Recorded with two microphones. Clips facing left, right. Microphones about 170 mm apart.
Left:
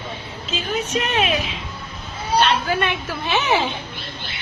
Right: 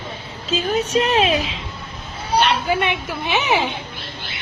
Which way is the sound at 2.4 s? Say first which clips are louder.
Right 1 dB; 15° right (ahead or behind).